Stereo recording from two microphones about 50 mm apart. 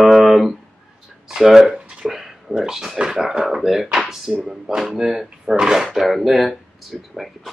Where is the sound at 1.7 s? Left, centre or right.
Centre.